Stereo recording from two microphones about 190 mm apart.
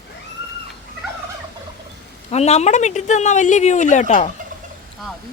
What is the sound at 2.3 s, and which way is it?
Speech, 35° left (ahead or behind).